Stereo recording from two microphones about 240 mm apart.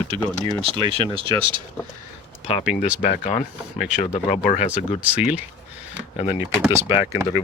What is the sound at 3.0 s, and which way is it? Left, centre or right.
Speech, left.